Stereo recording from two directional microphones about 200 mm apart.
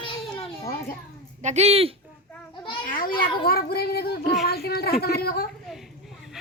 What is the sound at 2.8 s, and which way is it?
A child's voice, 45° left (ahead or behind).